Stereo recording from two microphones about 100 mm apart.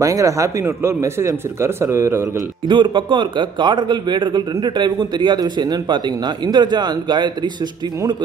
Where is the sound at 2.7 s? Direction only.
55° right (ahead or behind).